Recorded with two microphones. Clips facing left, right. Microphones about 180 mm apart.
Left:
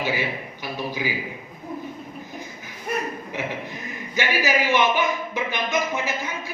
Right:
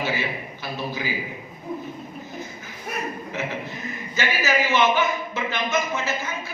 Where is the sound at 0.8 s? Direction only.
15° left (ahead or behind).